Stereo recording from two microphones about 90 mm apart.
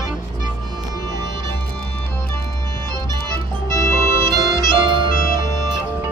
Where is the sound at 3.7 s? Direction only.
30° left (ahead or behind).